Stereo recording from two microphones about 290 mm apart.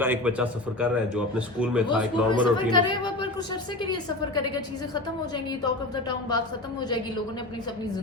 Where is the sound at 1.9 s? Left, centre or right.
Centre.